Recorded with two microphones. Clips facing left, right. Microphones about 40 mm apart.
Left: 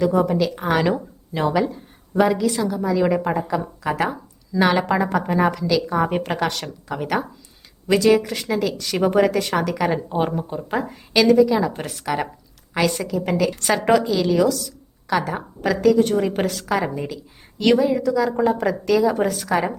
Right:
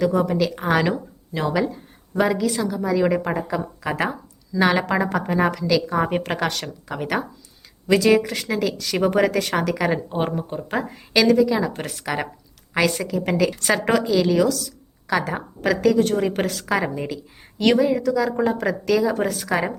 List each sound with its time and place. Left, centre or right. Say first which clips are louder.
0.0 s a woman's voice: left 1 dB; centre